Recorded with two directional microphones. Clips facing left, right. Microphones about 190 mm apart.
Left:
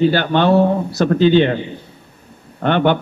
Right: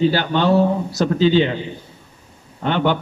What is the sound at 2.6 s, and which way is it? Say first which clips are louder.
Speech: left 4 dB; 60° left (ahead or behind).